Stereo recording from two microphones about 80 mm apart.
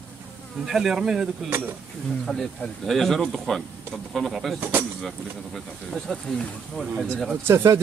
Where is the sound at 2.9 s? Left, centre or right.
Centre.